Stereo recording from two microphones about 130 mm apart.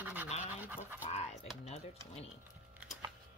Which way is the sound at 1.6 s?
55° left (ahead or behind).